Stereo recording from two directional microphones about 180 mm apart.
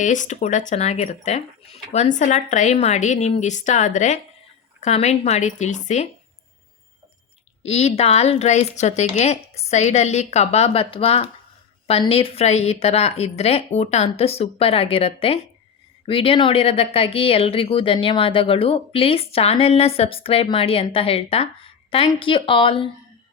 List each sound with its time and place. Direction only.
0.0 s speech: 45° left (ahead or behind)
7.6 s speech: 35° left (ahead or behind)